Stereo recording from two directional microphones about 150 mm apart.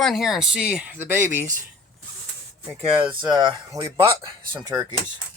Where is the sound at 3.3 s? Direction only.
25° right (ahead or behind).